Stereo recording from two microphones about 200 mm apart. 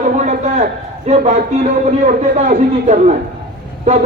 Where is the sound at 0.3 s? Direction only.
35° right (ahead or behind).